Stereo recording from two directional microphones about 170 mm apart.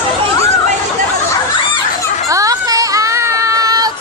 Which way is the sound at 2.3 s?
20° right (ahead or behind).